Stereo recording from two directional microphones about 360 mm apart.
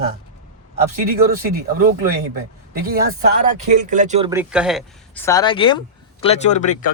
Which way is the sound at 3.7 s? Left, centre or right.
Right.